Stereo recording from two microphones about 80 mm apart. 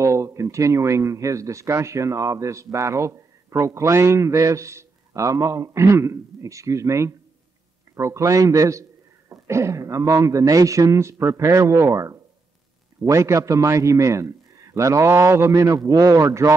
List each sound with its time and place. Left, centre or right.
0.0 s speech: right
15.5 s a man's voice: right